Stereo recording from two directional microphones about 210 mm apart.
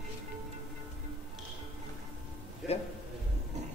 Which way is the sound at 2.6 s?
Centre (ahead or behind).